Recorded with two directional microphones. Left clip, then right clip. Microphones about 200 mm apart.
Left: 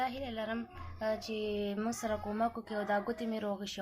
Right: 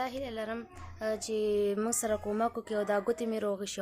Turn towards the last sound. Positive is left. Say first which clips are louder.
# right 4 dB
turn(degrees=-55)  # may be behind; listen again after turning